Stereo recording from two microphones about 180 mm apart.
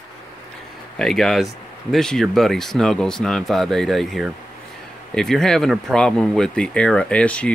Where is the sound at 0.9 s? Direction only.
Centre (ahead or behind).